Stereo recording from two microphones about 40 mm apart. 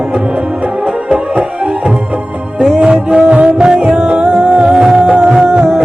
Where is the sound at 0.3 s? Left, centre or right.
Right.